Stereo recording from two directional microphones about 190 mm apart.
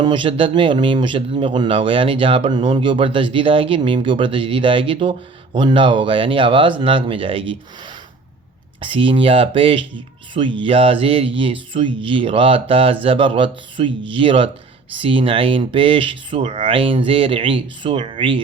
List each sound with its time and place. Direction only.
0.0 s speech: 25° right (ahead or behind)
8.8 s speech: 25° right (ahead or behind)